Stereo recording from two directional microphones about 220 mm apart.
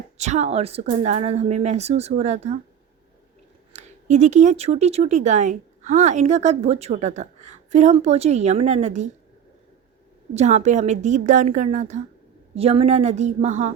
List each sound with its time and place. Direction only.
0.2 s speech: 30° right (ahead or behind)
3.7 s speech: 30° right (ahead or behind)
10.3 s speech: 30° right (ahead or behind)